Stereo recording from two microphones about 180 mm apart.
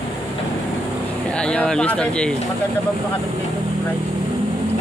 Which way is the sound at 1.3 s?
5° left (ahead or behind).